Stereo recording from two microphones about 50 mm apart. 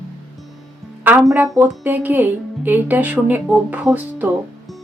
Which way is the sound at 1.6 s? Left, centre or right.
Right.